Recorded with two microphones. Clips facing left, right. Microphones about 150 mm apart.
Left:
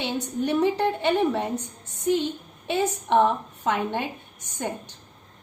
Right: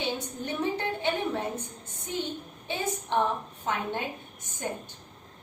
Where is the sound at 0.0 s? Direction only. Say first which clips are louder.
Left 6 dB; 70° left (ahead or behind).